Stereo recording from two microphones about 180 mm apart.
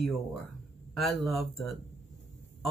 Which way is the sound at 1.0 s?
Centre (ahead or behind).